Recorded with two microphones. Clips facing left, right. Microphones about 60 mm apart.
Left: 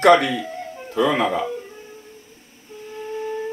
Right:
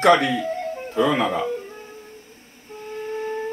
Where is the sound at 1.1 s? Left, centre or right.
Left.